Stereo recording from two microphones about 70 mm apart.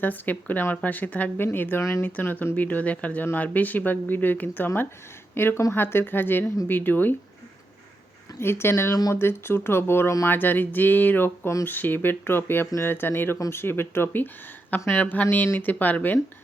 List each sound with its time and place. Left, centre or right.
0.0 s speech: left
1.8 s speech: left
2.0 s speech: left
8.4 s speech: left